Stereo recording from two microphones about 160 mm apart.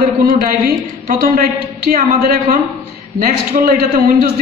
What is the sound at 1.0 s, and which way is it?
A woman's voice, 60° right (ahead or behind).